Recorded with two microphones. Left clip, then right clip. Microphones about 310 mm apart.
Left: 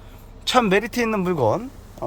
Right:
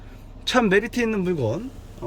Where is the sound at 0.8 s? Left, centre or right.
Centre.